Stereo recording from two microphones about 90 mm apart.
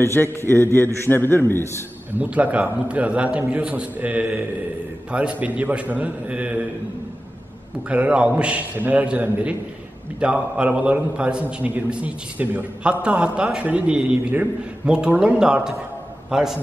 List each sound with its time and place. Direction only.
0.0 s a man's voice: 30° left (ahead or behind)
2.1 s a man's voice: 15° right (ahead or behind)
7.9 s a man's voice: 15° right (ahead or behind)